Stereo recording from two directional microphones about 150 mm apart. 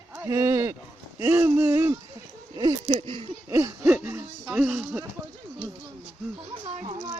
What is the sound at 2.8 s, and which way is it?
Speech, 40° right (ahead or behind).